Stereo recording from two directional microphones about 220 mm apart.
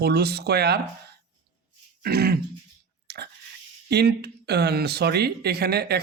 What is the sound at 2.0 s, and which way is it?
Throat clearing, 45° right (ahead or behind).